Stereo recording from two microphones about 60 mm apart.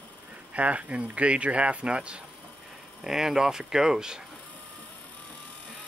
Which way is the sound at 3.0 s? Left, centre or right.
Centre.